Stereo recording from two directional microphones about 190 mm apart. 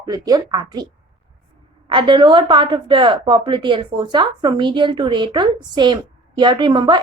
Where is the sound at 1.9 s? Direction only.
25° right (ahead or behind).